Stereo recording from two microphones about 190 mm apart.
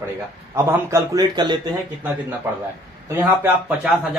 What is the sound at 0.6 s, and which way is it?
A man's voice, 15° right (ahead or behind).